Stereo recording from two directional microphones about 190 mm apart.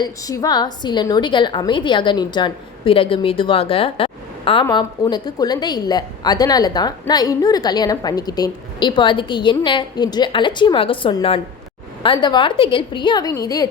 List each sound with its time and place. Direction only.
0.0 s a woman's voice: 20° left (ahead or behind)